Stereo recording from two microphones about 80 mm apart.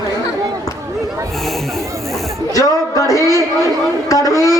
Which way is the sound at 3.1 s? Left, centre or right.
Right.